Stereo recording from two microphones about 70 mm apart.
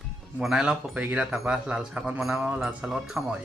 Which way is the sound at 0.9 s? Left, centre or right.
Right.